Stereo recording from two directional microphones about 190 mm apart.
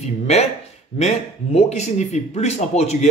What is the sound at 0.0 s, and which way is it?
Speech, 35° left (ahead or behind).